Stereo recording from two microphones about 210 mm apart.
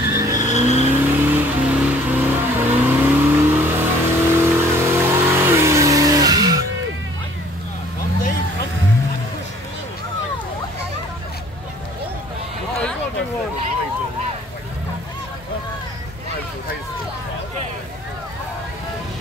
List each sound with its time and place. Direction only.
0.1 s vehicle: 15° right (ahead or behind)
0.6 s vehicle: 30° right (ahead or behind)
1.0 s vehicle: 10° right (ahead or behind)